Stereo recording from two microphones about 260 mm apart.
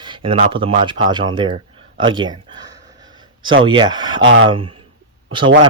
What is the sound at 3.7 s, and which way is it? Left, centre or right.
Speech, centre.